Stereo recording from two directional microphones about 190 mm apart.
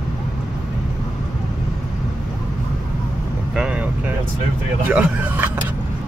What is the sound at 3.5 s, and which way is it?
Vehicle, 5° right (ahead or behind).